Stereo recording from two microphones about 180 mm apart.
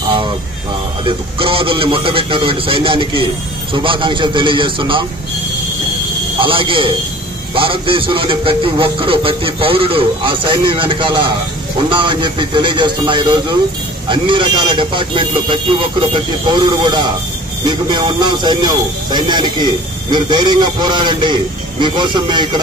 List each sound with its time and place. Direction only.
1.0 s speech: 30° right (ahead or behind)
6.3 s a man's voice: 30° right (ahead or behind)